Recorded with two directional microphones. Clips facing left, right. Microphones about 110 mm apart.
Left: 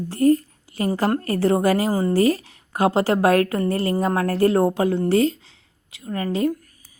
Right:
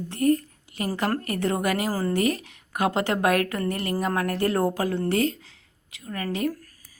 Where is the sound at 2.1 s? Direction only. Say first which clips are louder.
Left 6 dB; 30° left (ahead or behind).